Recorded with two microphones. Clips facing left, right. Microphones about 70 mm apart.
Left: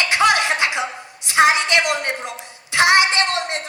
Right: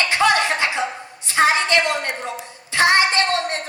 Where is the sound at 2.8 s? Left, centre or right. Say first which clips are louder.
Left 1 dB; centre.